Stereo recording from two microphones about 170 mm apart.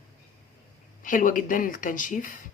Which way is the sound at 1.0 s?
50° left (ahead or behind).